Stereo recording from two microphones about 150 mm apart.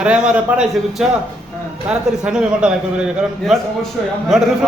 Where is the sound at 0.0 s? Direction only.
10° right (ahead or behind).